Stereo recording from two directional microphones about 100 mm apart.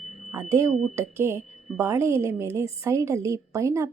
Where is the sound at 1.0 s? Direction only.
25° right (ahead or behind).